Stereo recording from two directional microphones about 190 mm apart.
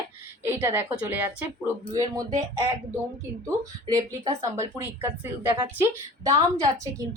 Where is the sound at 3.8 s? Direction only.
20° right (ahead or behind).